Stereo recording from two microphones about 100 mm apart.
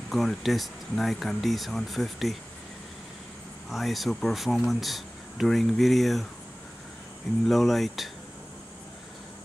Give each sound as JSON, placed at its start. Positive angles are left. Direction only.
{"t": 0.1, "sound": "speech", "side_deg": 0}
{"t": 3.7, "sound": "speech", "side_deg": 0}
{"t": 7.4, "sound": "speech", "side_deg": 0}